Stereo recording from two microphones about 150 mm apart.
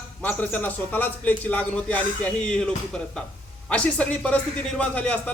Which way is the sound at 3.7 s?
10° left (ahead or behind).